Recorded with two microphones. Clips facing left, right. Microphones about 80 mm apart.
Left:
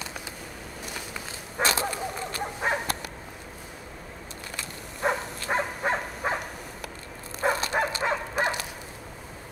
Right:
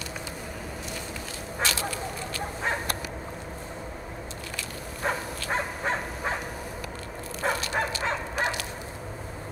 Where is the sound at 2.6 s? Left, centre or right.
Centre.